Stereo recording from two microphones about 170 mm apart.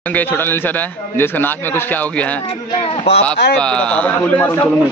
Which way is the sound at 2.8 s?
35° left (ahead or behind).